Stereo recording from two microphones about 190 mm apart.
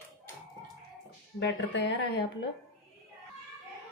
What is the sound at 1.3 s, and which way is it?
Speech, 65° left (ahead or behind).